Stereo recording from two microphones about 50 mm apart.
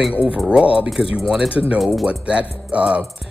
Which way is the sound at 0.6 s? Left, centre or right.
Right.